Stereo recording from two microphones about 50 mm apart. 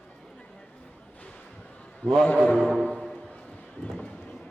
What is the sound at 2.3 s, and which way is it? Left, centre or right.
Mantra, left.